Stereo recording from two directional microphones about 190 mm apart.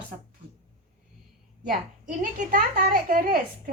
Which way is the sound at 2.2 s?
45° right (ahead or behind).